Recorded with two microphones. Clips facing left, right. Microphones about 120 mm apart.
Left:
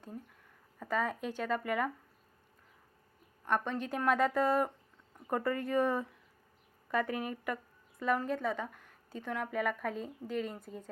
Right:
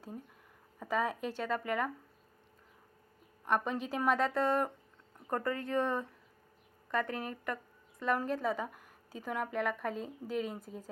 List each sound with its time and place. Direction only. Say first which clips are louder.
0.8 s a woman's voice: right 1 dB; 5° right (ahead or behind)
3.4 s a woman's voice: right 1 dB; 5° right (ahead or behind)